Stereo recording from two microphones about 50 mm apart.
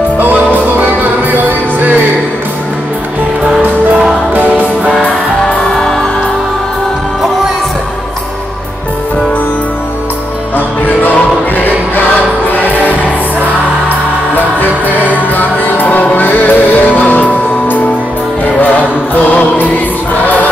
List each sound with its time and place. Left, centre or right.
0.2 s music: right
4.3 s music: right
5.0 s music: centre
11.0 s music: left
14.3 s music: left